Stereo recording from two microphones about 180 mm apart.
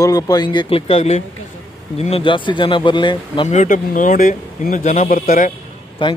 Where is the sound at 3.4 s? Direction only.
45° left (ahead or behind).